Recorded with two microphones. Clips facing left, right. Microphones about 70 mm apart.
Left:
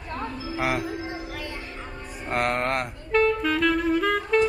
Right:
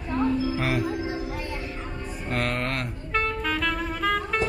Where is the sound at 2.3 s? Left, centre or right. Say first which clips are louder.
Left 3 dB; left.